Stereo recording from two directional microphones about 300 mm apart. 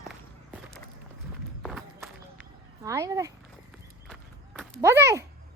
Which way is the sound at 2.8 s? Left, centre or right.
Centre.